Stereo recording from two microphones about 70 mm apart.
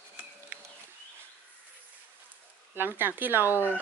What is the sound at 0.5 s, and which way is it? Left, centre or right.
Bird, right.